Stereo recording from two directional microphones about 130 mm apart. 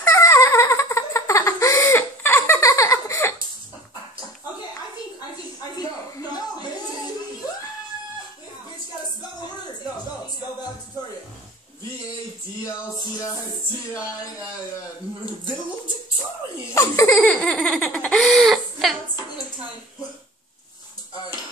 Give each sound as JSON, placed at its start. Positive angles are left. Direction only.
{"t": 0.0, "sound": "giggle", "side_deg": 20}
{"t": 16.7, "sound": "baby laughter", "side_deg": 20}
{"t": 17.2, "sound": "baby laughter", "side_deg": 5}